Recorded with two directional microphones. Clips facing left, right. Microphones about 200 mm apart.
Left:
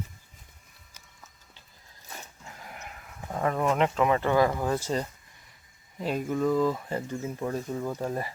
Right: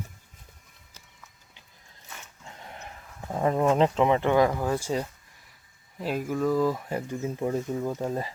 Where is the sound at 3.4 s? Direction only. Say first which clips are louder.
Right 3 dB; 30° right (ahead or behind).